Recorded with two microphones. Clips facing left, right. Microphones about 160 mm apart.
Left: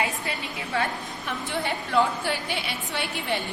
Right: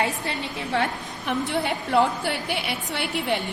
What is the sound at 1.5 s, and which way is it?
A woman's voice, 70° right (ahead or behind).